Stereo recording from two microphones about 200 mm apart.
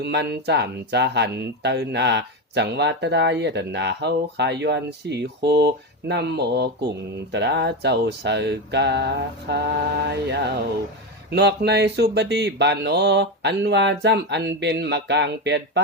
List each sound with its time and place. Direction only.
0.0 s speech: 55° right (ahead or behind)